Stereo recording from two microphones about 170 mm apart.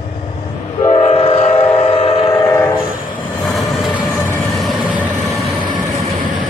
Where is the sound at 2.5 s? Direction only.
15° left (ahead or behind).